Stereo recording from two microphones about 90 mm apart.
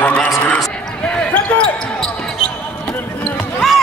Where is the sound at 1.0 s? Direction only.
10° left (ahead or behind).